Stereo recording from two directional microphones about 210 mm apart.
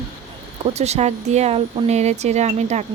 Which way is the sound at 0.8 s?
30° right (ahead or behind).